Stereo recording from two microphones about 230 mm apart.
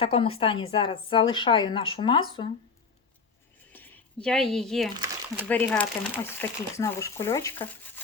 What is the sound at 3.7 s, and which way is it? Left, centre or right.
Speech, centre.